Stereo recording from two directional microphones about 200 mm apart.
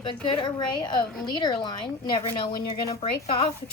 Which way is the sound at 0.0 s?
25° left (ahead or behind).